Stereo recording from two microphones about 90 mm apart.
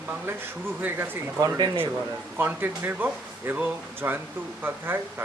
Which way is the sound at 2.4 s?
20° right (ahead or behind).